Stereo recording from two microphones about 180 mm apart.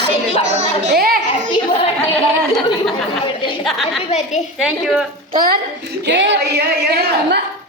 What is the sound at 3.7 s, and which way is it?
A woman's voice, centre (ahead or behind).